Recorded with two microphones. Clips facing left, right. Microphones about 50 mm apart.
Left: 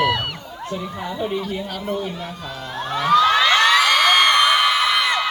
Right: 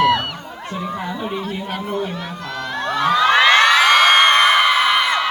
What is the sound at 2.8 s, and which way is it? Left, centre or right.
Crowd, right.